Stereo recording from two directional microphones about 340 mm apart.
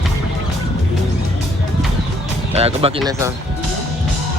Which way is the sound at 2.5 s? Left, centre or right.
Centre.